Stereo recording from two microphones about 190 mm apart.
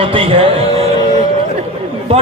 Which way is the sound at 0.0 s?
30° right (ahead or behind).